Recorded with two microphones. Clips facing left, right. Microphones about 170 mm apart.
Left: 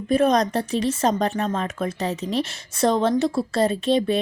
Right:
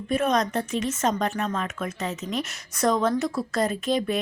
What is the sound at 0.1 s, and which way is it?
Speech, 35° left (ahead or behind).